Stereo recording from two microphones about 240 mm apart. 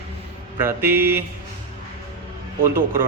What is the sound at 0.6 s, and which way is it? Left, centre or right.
Speech, centre.